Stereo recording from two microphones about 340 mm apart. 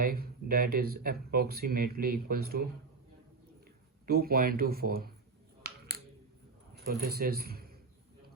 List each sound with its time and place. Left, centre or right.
0.0 s speech: right
4.0 s speech: right
6.8 s speech: right